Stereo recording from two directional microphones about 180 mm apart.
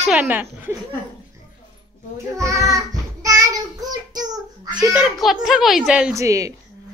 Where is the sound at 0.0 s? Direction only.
5° right (ahead or behind).